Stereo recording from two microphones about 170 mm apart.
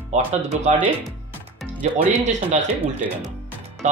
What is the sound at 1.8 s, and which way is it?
Speech, 45° right (ahead or behind).